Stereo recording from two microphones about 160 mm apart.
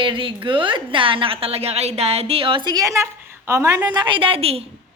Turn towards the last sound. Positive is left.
turn(degrees=-40)  # may be behind; listen again after turning